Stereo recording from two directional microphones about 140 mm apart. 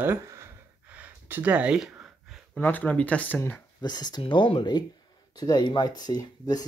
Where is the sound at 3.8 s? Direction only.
30° left (ahead or behind).